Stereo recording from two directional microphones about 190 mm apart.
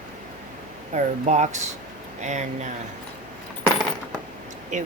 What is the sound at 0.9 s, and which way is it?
Speech, 40° right (ahead or behind).